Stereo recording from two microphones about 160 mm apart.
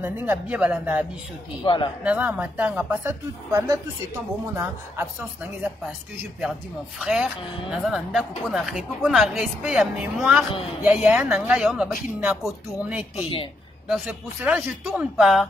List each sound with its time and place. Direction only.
0.0 s speech: 10° right (ahead or behind)
1.6 s speech: 30° left (ahead or behind)
2.0 s speech: 10° right (ahead or behind)
7.0 s a woman's voice: centre (ahead or behind)
13.1 s a woman's voice: 35° left (ahead or behind)
13.8 s a woman's voice: 5° right (ahead or behind)